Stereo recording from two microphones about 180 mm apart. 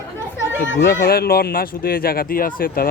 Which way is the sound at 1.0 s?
60° left (ahead or behind).